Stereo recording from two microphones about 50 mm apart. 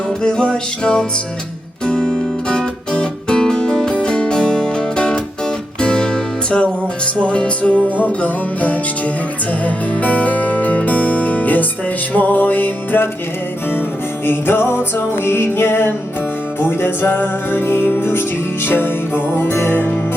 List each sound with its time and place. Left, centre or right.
0.2 s music: centre; by 13.1 s left
14.3 s music: left